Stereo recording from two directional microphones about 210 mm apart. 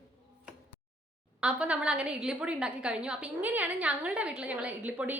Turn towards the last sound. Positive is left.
turn(degrees=-5)  # may be behind; listen again after turning